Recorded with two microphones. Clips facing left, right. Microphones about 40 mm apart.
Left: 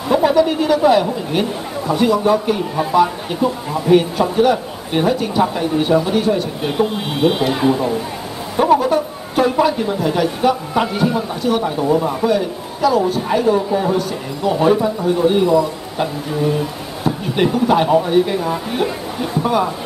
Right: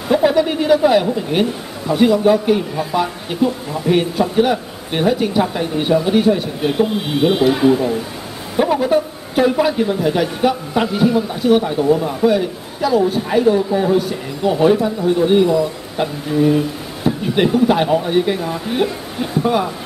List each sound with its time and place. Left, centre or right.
0.1 s a woman's voice: centre
11.8 s a woman's voice: centre
12.3 s a man's voice: centre
18.0 s a woman's voice: centre